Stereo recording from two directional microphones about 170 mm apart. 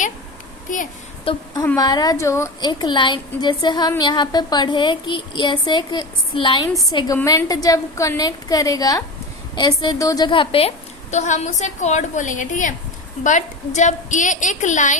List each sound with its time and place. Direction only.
1.2 s a woman's voice: 30° left (ahead or behind)
1.6 s a woman's voice: 20° left (ahead or behind); by 14.9 s 45° left (ahead or behind)